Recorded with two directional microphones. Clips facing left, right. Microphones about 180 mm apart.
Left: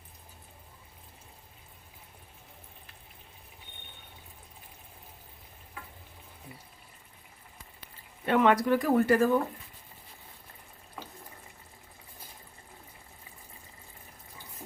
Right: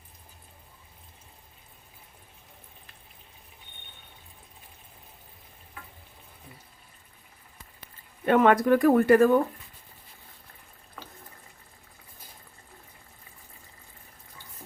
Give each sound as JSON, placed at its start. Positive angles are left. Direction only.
{"t": 8.3, "sound": "speech", "side_deg": -50}